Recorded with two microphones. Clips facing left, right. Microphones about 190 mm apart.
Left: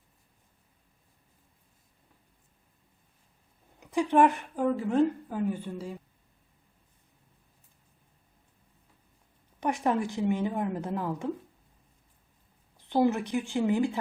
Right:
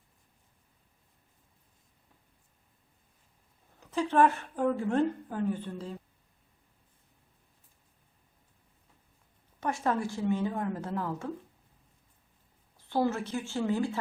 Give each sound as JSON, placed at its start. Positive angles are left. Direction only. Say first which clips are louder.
{"t": 3.8, "sound": "speech", "louder": "left 2 dB", "side_deg": 15}
{"t": 4.6, "sound": "a woman's voice", "louder": "left 2 dB", "side_deg": 5}
{"t": 9.6, "sound": "a woman's voice", "louder": "left 3 dB", "side_deg": 15}
{"t": 12.7, "sound": "a woman's voice", "louder": "left 4 dB", "side_deg": 15}